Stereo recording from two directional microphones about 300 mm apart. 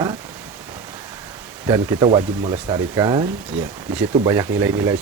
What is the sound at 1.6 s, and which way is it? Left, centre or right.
Speech, centre.